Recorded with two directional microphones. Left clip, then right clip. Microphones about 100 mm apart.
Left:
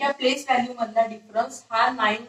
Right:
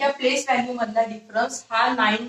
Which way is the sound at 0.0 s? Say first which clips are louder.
Right 2 dB; 25° right (ahead or behind).